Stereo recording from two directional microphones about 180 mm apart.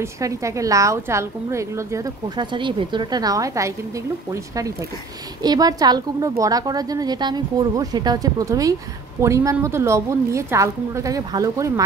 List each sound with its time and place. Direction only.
0.0 s a woman's voice: 15° right (ahead or behind)